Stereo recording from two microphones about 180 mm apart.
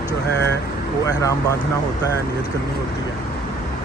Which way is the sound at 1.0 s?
15° left (ahead or behind).